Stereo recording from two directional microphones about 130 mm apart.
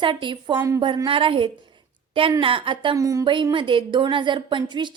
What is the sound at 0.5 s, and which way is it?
Speech, 20° right (ahead or behind).